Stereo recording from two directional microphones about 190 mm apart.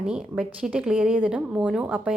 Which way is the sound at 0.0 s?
5° right (ahead or behind).